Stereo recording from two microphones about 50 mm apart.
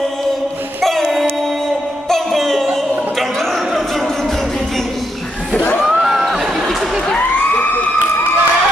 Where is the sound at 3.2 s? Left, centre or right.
Centre.